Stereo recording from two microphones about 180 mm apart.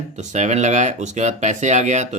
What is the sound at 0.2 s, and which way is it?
Speech, 40° right (ahead or behind).